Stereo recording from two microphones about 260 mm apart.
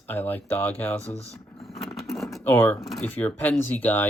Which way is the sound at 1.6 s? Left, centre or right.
Centre.